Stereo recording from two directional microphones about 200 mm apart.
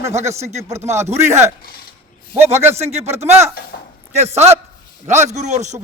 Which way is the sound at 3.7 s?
50° left (ahead or behind).